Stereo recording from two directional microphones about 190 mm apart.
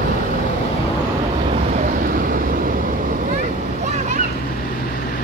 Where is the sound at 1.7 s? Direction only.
45° right (ahead or behind).